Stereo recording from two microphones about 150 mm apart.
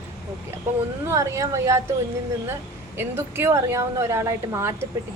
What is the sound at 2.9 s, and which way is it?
A woman's voice, 15° right (ahead or behind).